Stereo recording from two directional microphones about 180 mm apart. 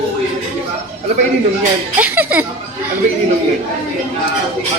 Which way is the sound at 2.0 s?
10° right (ahead or behind).